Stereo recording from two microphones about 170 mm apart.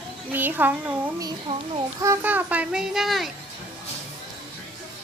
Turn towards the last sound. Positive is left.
turn(degrees=0)  # may be behind; listen again after turning